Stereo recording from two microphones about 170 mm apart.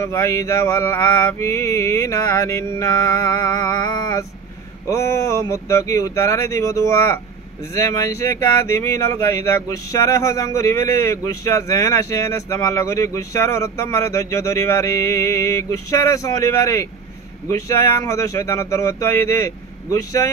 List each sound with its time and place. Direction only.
0.0 s speech: 15° left (ahead or behind)